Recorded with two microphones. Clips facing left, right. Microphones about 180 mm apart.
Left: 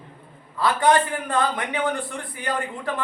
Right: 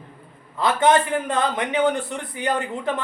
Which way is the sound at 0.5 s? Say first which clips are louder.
Right 1 dB; 20° right (ahead or behind).